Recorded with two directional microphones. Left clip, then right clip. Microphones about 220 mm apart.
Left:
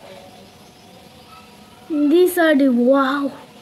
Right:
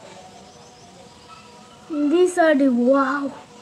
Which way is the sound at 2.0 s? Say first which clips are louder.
Left 2 dB; 30° left (ahead or behind).